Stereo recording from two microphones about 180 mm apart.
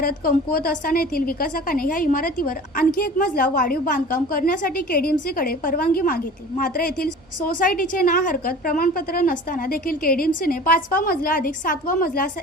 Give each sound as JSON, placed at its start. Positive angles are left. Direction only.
{"t": 0.0, "sound": "a woman's voice", "side_deg": 55}